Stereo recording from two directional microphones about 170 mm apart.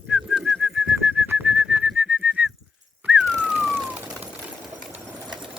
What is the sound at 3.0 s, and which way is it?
Whistling, 5° right (ahead or behind).